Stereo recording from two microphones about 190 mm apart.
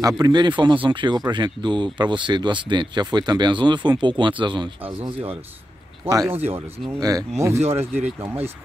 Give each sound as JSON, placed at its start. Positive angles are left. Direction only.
{"t": 0.0, "sound": "speech", "side_deg": -20}
{"t": 6.0, "sound": "speech", "side_deg": -15}
{"t": 7.5, "sound": "speech", "side_deg": -35}
{"t": 7.8, "sound": "speech", "side_deg": -10}